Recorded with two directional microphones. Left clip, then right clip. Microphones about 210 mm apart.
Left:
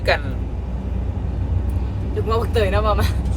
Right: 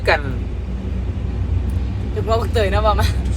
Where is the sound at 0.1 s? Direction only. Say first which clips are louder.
Right 3 dB; 25° right (ahead or behind).